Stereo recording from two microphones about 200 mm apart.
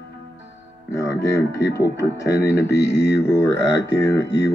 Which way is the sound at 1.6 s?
55° left (ahead or behind).